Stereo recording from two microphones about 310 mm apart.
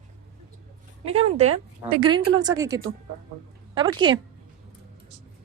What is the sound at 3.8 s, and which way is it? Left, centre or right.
Speech, centre.